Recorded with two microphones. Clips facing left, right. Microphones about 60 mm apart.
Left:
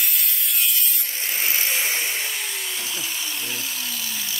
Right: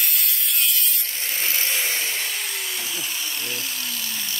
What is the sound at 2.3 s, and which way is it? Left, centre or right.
Drill, centre.